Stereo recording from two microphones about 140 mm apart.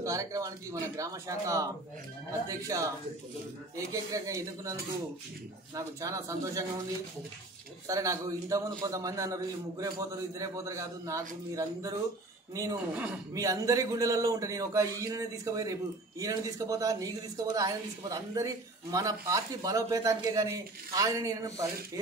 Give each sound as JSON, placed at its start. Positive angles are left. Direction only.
{"t": 0.0, "sound": "speech", "side_deg": -25}
{"t": 5.8, "sound": "speech", "side_deg": -25}
{"t": 7.8, "sound": "speech", "side_deg": -20}
{"t": 12.9, "sound": "a man's voice", "side_deg": -10}
{"t": 13.3, "sound": "speech", "side_deg": -25}